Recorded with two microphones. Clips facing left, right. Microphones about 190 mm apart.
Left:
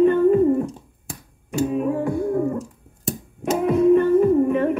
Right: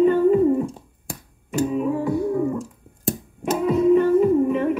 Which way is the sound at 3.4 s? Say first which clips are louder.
Left 1 dB; 50° left (ahead or behind).